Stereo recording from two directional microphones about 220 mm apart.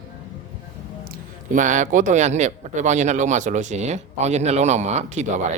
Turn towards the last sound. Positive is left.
turn(degrees=-30)  # may be behind; listen again after turning